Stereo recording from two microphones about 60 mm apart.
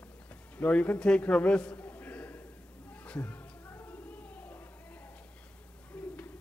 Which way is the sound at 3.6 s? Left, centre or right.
Left.